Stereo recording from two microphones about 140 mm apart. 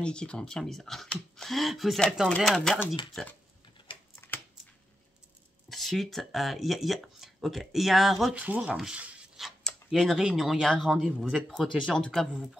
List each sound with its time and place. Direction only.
0.0 s speech: 5° left (ahead or behind)
4.1 s a sound: 15° left (ahead or behind)
5.7 s speech: centre (ahead or behind)